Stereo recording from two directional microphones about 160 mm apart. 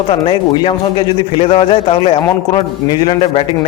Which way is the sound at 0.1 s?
30° left (ahead or behind).